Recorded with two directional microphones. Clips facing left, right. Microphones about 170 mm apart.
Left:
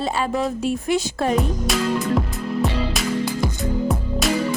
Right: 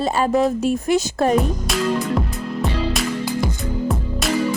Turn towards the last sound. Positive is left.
turn(degrees=0)  # may be behind; listen again after turning